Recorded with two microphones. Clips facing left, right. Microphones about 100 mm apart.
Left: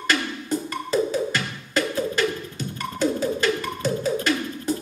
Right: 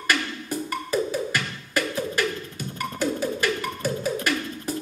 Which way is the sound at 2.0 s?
10° right (ahead or behind).